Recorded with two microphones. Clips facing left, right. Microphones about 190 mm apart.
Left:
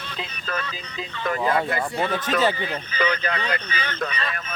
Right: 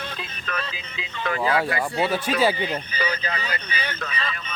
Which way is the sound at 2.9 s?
65° left (ahead or behind).